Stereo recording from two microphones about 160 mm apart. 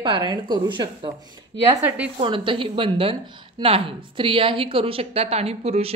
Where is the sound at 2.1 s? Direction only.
35° right (ahead or behind).